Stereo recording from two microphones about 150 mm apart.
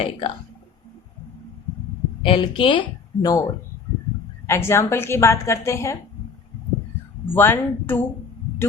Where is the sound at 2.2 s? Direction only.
35° left (ahead or behind).